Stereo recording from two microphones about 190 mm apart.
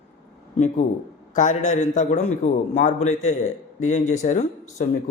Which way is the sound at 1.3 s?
40° left (ahead or behind).